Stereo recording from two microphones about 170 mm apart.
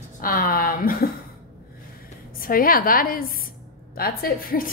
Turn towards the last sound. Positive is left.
turn(degrees=60)  # may be behind; listen again after turning